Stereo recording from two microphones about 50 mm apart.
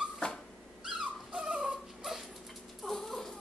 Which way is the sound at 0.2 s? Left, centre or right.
Centre.